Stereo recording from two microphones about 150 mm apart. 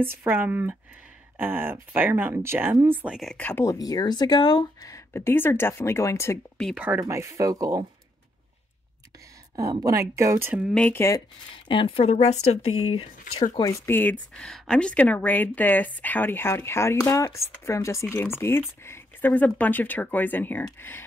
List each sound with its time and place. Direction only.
0.0 s speech: 15° right (ahead or behind)
3.3 s speech: 15° left (ahead or behind)
3.7 s speech: 25° left (ahead or behind)
6.6 s speech: 5° right (ahead or behind)
7.0 s speech: 20° right (ahead or behind)
9.6 s speech: 20° right (ahead or behind)
10.7 s speech: 10° left (ahead or behind); by 13.1 s 40° left (ahead or behind)
13.6 s speech: 20° left (ahead or behind)